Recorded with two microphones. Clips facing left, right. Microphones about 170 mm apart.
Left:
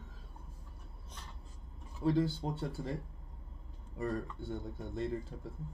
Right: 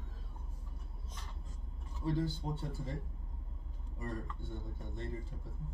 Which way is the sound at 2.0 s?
65° left (ahead or behind).